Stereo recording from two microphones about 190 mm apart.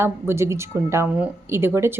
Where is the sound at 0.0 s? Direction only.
15° right (ahead or behind).